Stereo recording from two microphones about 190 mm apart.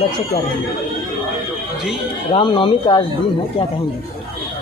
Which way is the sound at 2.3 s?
25° left (ahead or behind).